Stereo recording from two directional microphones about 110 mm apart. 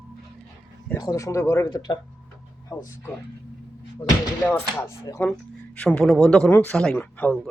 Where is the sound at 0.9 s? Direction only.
30° left (ahead or behind).